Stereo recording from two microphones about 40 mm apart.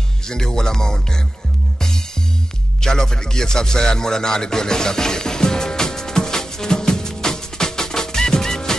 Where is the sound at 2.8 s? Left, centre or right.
Centre.